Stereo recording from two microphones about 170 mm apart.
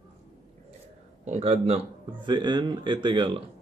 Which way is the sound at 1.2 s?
40° right (ahead or behind).